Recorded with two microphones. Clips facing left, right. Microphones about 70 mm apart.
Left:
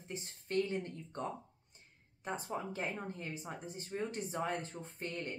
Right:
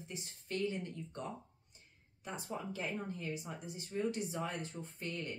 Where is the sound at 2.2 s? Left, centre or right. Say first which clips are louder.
Left 3 dB; left.